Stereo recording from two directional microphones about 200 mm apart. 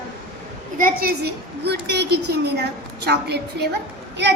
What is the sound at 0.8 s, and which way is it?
A woman's voice, 50° right (ahead or behind).